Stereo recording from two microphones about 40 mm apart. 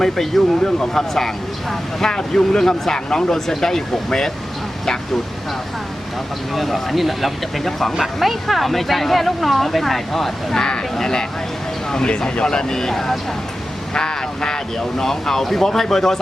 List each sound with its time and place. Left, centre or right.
0.0 s speech: centre
6.5 s speech: centre